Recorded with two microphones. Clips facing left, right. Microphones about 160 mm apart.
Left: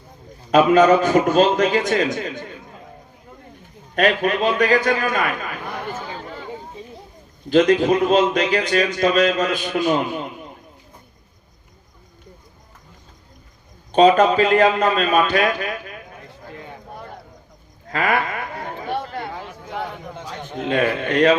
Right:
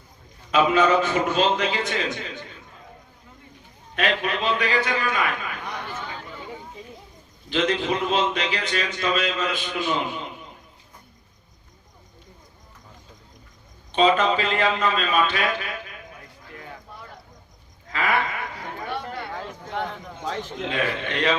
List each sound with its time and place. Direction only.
0.5 s a man's voice: 45° left (ahead or behind)
3.9 s a man's voice: 45° left (ahead or behind)
5.9 s a sound: 35° left (ahead or behind)
7.5 s a man's voice: 45° left (ahead or behind)
13.9 s a man's voice: 45° left (ahead or behind)
17.9 s a sound: 45° left (ahead or behind)
20.7 s a man's voice: 45° left (ahead or behind)